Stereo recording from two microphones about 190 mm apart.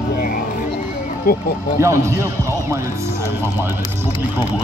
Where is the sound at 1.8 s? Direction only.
15° right (ahead or behind).